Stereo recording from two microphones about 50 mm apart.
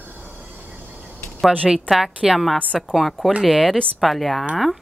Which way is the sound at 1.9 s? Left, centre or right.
Centre.